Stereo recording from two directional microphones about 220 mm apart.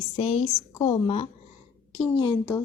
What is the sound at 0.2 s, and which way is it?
A woman's voice, 25° left (ahead or behind).